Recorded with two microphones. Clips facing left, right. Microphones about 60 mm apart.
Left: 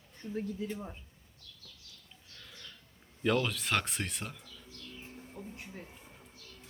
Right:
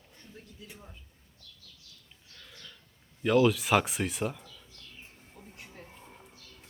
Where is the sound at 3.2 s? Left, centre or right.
Centre.